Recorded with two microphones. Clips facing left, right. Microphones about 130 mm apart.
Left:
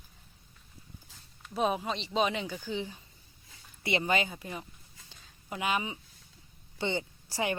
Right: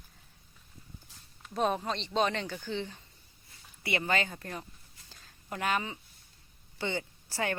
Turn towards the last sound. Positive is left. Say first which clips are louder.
# left 1 dB
turn(degrees=15)  # may be behind; listen again after turning